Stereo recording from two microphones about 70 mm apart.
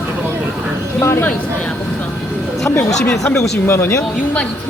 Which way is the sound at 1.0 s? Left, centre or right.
Left.